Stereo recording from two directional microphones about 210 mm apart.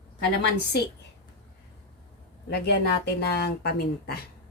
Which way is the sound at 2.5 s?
50° left (ahead or behind).